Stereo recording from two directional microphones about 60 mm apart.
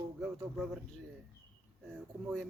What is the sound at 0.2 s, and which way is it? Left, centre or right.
Speech, centre.